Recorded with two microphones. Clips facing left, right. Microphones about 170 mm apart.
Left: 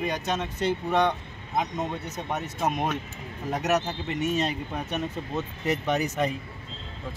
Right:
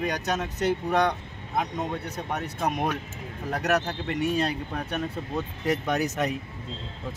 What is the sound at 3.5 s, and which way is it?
Speech, 10° left (ahead or behind).